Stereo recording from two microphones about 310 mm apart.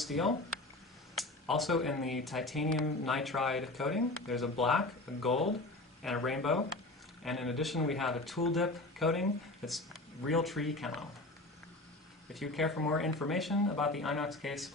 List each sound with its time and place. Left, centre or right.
0.0 s speech: centre
12.4 s speech: centre